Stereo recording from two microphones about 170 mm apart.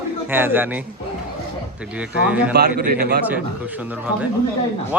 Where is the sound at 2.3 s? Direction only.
10° right (ahead or behind).